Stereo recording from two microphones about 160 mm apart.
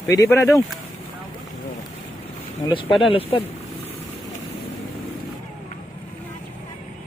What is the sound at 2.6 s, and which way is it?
Speech, 25° left (ahead or behind).